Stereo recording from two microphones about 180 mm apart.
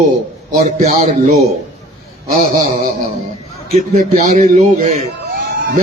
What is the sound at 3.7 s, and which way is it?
A man's voice, 40° right (ahead or behind).